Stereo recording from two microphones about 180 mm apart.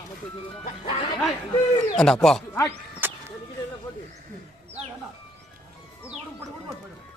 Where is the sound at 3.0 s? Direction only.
10° right (ahead or behind).